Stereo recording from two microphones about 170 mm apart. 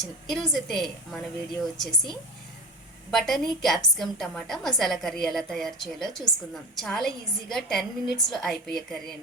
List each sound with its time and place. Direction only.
0.0 s a woman's voice: centre (ahead or behind)